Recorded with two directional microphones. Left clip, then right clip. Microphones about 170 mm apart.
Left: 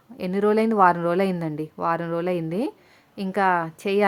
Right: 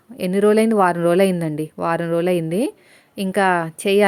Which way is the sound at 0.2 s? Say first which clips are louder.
Right 5 dB; 35° right (ahead or behind).